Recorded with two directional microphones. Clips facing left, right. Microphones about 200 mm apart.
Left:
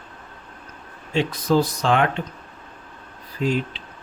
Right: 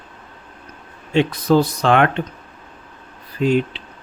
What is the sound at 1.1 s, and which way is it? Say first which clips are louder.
Speech: right 5 dB; 60° right (ahead or behind).